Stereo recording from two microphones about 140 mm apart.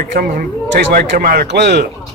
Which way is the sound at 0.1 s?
85° right.